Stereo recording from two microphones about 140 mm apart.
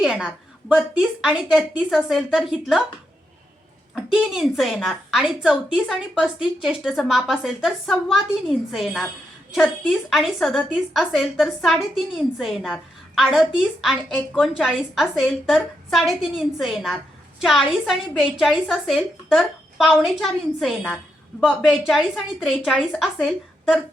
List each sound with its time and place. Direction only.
0.0 s a woman's voice: 5° right (ahead or behind)
3.9 s a woman's voice: 5° right (ahead or behind)